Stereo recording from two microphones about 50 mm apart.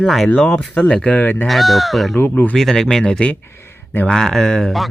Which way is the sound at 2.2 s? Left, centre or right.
Left.